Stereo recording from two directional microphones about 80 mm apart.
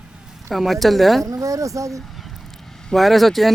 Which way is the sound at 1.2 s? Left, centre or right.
Right.